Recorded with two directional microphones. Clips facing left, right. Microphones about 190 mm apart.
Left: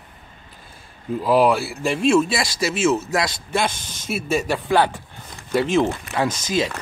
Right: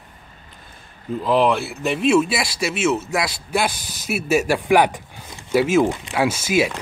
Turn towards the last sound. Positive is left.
turn(degrees=-10)  # may be behind; listen again after turning